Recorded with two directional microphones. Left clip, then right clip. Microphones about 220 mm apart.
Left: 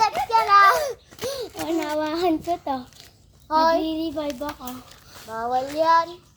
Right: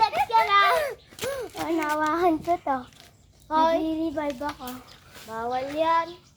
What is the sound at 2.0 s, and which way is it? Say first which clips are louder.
Child singing: right 1 dB; 35° left (ahead or behind).